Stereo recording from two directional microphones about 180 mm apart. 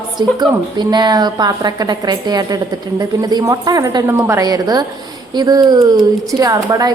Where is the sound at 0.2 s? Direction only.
25° right (ahead or behind).